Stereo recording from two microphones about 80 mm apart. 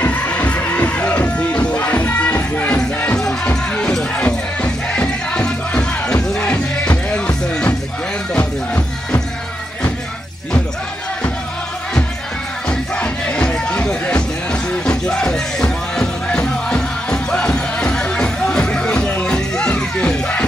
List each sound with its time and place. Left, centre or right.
0.0 s music: centre
12.6 s music: centre